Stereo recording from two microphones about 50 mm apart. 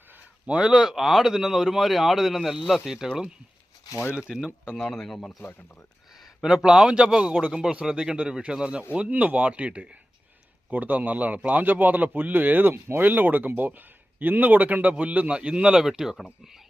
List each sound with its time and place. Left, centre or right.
0.4 s speech: centre
4.3 s a man's voice: centre
4.7 s speech: centre
5.0 s speech: centre
5.4 s speech: left
6.1 s a man's voice: centre
10.7 s a man's voice: right
12.7 s speech: right
13.1 s a man's voice: right; by 16.6 s centre